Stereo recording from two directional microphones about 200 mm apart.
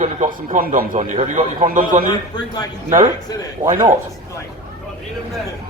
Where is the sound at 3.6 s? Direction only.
40° right (ahead or behind).